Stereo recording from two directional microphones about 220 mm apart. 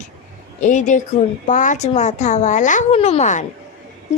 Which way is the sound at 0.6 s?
35° left (ahead or behind).